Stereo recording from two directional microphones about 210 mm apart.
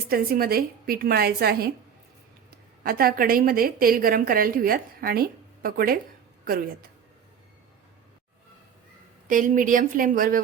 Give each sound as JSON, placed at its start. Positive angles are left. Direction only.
{"t": 0.1, "sound": "a woman's voice", "side_deg": -45}
{"t": 2.8, "sound": "a woman's voice", "side_deg": -45}
{"t": 9.2, "sound": "a woman's voice", "side_deg": -40}